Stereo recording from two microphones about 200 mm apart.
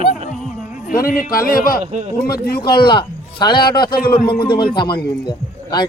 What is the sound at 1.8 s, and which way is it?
Speech, 35° right (ahead or behind).